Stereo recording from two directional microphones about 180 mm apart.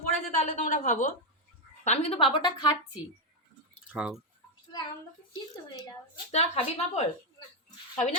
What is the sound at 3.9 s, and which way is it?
Speech, 5° right (ahead or behind).